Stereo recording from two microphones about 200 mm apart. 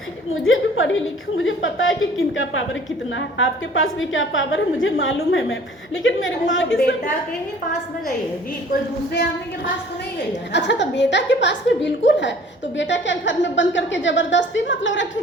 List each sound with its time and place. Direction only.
0.4 s a woman's voice: 75° left (ahead or behind)
6.7 s a woman's voice: 50° left (ahead or behind)
10.5 s a woman's voice: 60° left (ahead or behind)